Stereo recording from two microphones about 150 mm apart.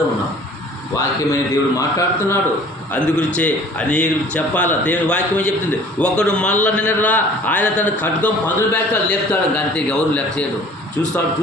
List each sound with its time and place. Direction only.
0.9 s a man's voice: 20° left (ahead or behind)
2.9 s a man's voice: 10° left (ahead or behind)